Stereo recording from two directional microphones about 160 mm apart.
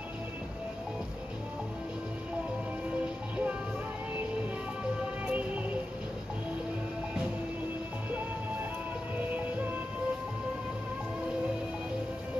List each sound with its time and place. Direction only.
5.2 s music: 10° right (ahead or behind)